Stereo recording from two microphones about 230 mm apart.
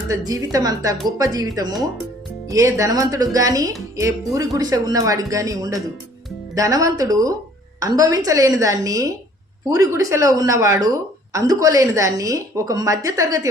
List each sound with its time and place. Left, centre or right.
0.1 s a woman's voice: centre